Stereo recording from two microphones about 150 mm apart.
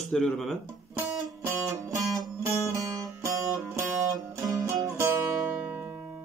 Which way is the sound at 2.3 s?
20° right (ahead or behind).